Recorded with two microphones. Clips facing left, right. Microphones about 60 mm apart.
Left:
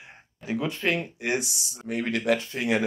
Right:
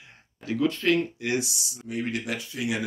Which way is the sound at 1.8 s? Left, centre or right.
Left.